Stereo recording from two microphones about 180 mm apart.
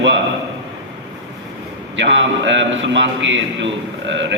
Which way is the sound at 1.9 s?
90° right.